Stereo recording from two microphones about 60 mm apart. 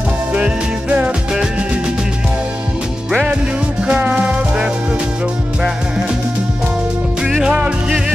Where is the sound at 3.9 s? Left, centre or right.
Right.